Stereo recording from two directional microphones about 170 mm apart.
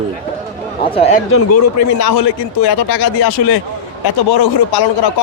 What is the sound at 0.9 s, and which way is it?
Speech, 35° left (ahead or behind).